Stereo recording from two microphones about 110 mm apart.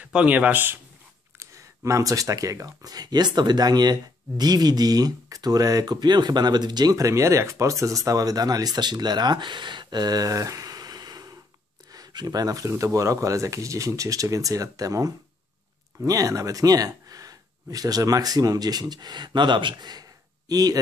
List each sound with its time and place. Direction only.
0.0 s a man's voice: 10° right (ahead or behind)
1.4 s speech: 25° right (ahead or behind)